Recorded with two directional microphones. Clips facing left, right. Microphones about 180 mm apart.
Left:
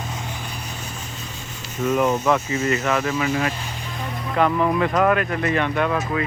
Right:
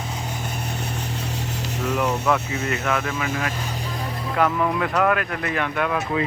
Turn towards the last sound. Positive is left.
turn(degrees=0)  # may be behind; listen again after turning